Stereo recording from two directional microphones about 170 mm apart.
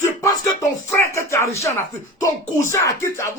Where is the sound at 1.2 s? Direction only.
15° left (ahead or behind).